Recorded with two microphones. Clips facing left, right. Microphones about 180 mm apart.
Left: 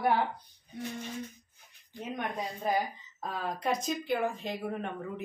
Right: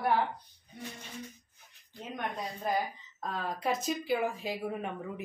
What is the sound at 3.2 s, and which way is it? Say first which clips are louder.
Speech: even; 5° left (ahead or behind).